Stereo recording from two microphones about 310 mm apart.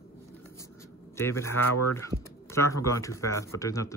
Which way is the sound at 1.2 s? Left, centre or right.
Centre.